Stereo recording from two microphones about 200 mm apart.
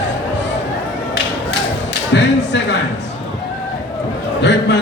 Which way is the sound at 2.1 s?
60° left (ahead or behind).